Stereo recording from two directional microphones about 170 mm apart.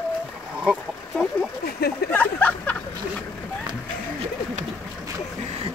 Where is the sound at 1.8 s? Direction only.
65° left (ahead or behind).